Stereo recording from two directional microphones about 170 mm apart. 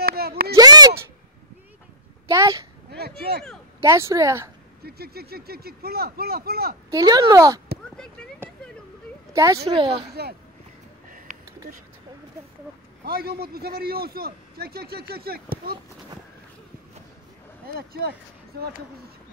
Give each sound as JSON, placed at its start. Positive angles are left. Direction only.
{"t": 0.0, "sound": "a sound", "side_deg": -65}
{"t": 0.6, "sound": "a sound", "side_deg": -20}
{"t": 2.2, "sound": "a woman's voice", "side_deg": -20}
{"t": 2.9, "sound": "speech", "side_deg": -65}
{"t": 3.8, "sound": "speech", "side_deg": -20}
{"t": 4.8, "sound": "a man's voice", "side_deg": -65}
{"t": 6.9, "sound": "speech", "side_deg": -20}
{"t": 7.9, "sound": "speech", "side_deg": 5}
{"t": 9.3, "sound": "speech", "side_deg": -20}
{"t": 9.7, "sound": "speech", "side_deg": -30}
{"t": 11.1, "sound": "a sound", "side_deg": -55}
{"t": 13.0, "sound": "a man's voice", "side_deg": -65}
{"t": 17.7, "sound": "speech", "side_deg": -65}